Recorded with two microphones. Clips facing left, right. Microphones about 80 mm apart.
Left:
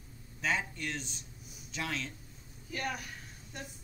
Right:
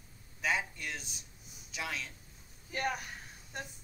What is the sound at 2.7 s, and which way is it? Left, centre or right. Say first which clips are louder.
Speech: right 2 dB; right.